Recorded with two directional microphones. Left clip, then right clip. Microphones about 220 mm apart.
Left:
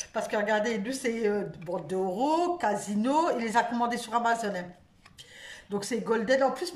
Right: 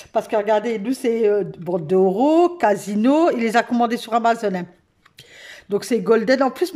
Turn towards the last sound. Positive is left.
turn(degrees=-40)  # may be behind; listen again after turning